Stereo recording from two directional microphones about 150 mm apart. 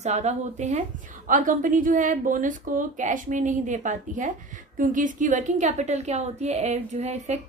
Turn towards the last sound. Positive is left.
turn(degrees=-50)  # may be behind; listen again after turning